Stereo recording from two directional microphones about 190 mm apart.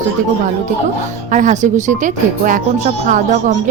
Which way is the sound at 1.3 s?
40° right (ahead or behind).